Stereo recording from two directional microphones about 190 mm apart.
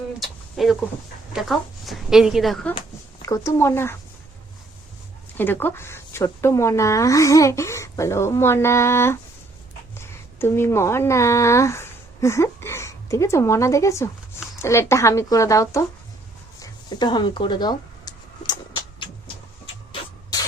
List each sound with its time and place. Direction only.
0.2 s speech: centre (ahead or behind)
3.2 s speech: 15° left (ahead or behind)
5.4 s speech: 10° left (ahead or behind)
16.6 s a sound: 25° left (ahead or behind)